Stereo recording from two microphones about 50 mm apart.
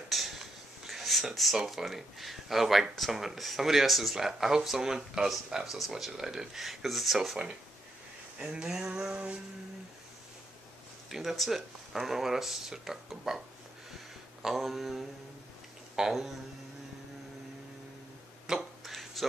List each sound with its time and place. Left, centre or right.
0.1 s a sound: centre
1.3 s speech: centre
8.4 s speech: centre
9.1 s music: right
11.1 s speech: centre
14.4 s speech: centre
16.1 s speech: centre
18.5 s a sound: centre